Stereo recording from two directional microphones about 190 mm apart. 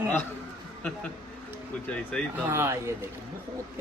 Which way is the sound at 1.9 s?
5° left (ahead or behind).